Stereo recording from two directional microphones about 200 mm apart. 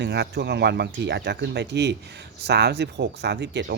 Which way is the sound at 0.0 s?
55° right (ahead or behind).